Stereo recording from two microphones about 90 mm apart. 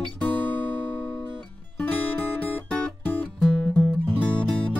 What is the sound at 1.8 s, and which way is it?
Music, 15° left (ahead or behind).